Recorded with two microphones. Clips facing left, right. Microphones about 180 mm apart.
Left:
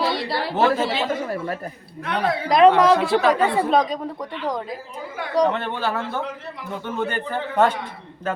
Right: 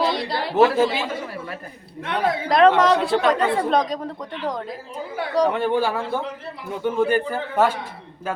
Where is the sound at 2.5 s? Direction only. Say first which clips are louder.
Left 2 dB; centre (ahead or behind).